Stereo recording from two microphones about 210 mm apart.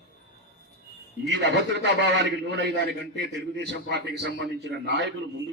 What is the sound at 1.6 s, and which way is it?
A man's voice, 55° right (ahead or behind).